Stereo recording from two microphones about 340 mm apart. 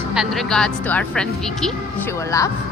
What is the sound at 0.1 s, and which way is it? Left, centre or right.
Speech, centre.